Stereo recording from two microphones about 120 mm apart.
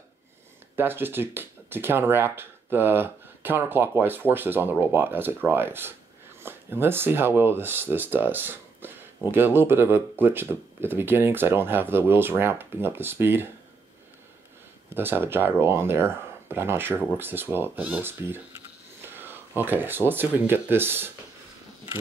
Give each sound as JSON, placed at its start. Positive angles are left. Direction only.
{"t": 0.7, "sound": "speech", "side_deg": -20}
{"t": 15.0, "sound": "speech", "side_deg": -20}